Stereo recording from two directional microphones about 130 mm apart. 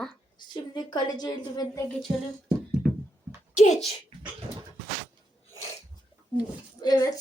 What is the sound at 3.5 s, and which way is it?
Speech, 60° left (ahead or behind).